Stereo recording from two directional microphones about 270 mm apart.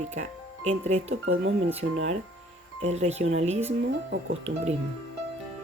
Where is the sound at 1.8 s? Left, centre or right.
Right.